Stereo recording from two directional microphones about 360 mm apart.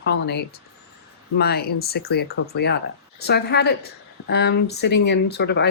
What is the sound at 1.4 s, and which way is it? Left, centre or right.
Speech, left.